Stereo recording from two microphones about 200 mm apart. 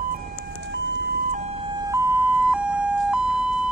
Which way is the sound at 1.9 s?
10° right (ahead or behind).